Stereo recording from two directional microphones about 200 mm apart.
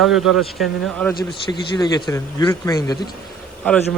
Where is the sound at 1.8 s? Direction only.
20° left (ahead or behind).